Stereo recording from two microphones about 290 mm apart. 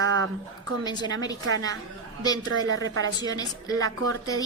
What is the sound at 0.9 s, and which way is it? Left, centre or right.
Speech, centre.